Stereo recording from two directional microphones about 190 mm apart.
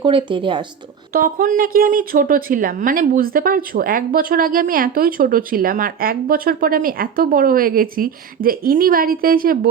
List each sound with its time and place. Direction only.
0.0 s speech: 25° right (ahead or behind)
1.1 s speech: 45° right (ahead or behind)